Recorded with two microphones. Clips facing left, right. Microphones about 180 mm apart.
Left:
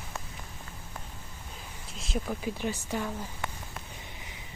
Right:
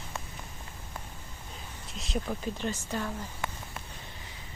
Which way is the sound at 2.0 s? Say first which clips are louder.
Even; centre (ahead or behind).